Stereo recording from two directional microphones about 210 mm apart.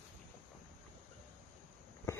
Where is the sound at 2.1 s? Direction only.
15° left (ahead or behind).